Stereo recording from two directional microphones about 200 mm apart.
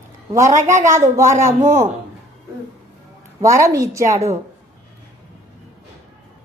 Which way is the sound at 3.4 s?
15° right (ahead or behind).